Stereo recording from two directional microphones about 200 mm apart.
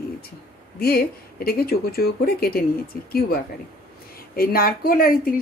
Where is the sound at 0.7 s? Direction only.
50° left (ahead or behind).